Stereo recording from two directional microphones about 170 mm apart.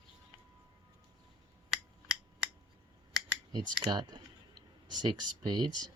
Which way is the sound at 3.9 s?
25° right (ahead or behind).